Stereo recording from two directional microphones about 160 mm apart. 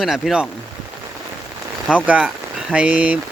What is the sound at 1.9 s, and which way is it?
Speech, 5° right (ahead or behind).